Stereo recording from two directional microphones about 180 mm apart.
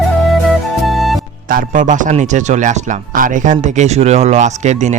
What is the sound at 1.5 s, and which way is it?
A man's voice, 45° right (ahead or behind).